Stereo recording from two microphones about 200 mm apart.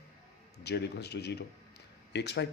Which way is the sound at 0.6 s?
55° left (ahead or behind).